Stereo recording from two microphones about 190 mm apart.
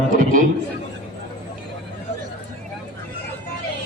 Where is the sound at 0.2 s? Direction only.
45° right (ahead or behind).